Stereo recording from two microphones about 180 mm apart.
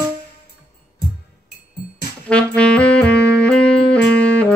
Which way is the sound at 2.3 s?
5° left (ahead or behind).